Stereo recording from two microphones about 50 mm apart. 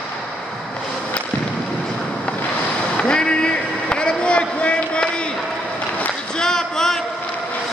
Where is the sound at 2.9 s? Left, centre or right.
Centre.